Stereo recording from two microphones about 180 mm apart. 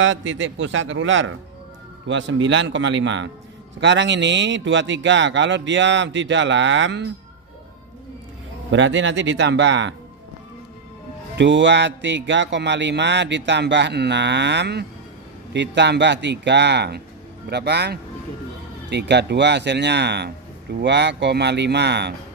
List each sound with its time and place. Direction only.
0.0 s a man's voice: 90° right
8.7 s a man's voice: 90° right
11.3 s speech: 85° right